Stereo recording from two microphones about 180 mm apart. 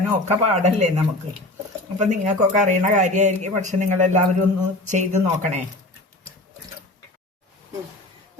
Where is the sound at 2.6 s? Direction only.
40° right (ahead or behind).